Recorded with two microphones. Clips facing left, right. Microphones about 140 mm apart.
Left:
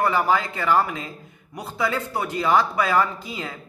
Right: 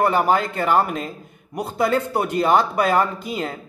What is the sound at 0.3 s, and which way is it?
A man's voice, 55° right (ahead or behind).